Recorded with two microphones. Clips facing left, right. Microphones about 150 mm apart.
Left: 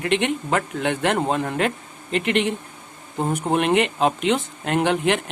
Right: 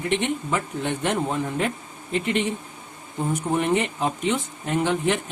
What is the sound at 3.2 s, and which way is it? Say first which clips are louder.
Speech: left 2 dB; 70° left (ahead or behind).